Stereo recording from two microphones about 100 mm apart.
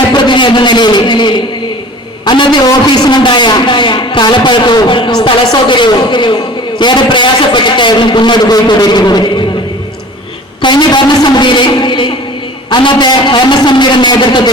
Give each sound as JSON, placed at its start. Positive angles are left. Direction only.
{"t": 0.1, "sound": "a man's voice", "side_deg": 50}
{"t": 10.6, "sound": "a man's voice", "side_deg": 50}